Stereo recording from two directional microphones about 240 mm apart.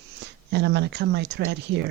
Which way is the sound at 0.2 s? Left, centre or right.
Right.